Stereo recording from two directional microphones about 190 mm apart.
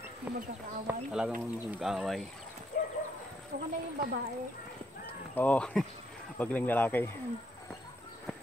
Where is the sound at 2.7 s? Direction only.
50° left (ahead or behind).